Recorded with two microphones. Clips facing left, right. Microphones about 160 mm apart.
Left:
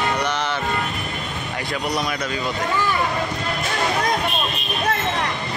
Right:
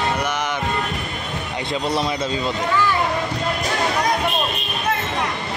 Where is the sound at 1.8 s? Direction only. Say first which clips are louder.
Right 3 dB; 25° right (ahead or behind).